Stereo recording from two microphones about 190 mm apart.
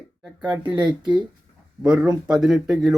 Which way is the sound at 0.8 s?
25° right (ahead or behind).